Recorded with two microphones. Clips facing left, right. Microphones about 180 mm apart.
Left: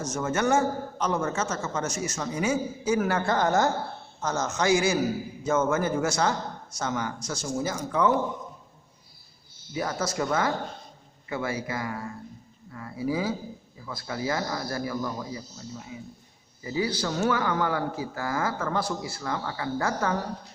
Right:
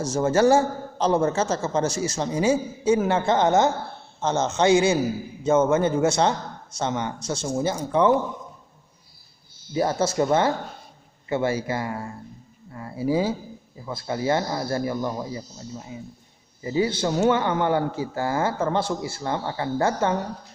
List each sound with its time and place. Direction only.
0.0 s a man's voice: 30° right (ahead or behind)
9.7 s a man's voice: 30° right (ahead or behind)